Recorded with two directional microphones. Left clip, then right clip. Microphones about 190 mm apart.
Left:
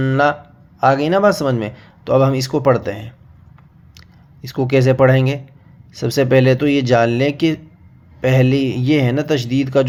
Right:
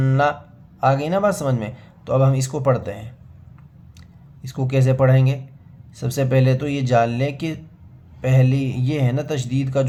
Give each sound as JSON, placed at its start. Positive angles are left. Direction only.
{"t": 0.0, "sound": "speech", "side_deg": 20}
{"t": 4.4, "sound": "speech", "side_deg": 25}